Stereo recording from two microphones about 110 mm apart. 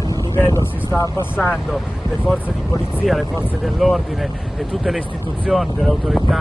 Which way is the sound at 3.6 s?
Centre (ahead or behind).